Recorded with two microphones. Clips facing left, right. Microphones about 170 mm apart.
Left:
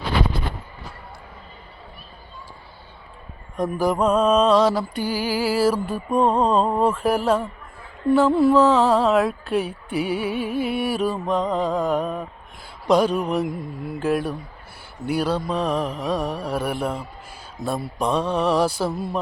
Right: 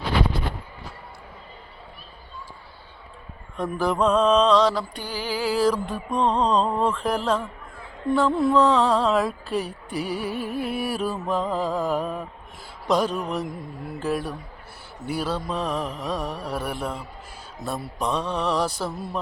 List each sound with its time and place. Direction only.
3.6 s music: 10° left (ahead or behind)
8.1 s mantra: 5° left (ahead or behind)